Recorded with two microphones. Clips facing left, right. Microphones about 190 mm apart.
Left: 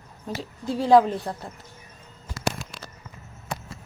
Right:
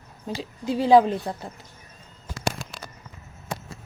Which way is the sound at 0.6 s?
Centre (ahead or behind).